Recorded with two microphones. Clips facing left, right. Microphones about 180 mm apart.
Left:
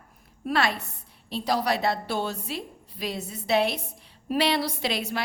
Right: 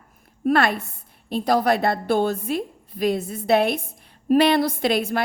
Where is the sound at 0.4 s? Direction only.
55° right (ahead or behind).